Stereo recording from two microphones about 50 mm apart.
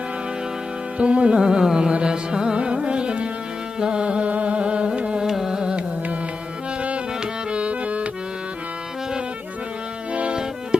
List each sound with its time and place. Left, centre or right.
0.9 s carnatic music: right
3.8 s music: centre
7.5 s accordion: right
10.7 s music: centre